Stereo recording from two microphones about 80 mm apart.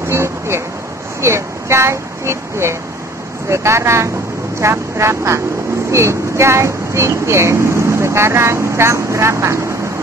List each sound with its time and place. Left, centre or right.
0.1 s vehicle: right
1.2 s speech: right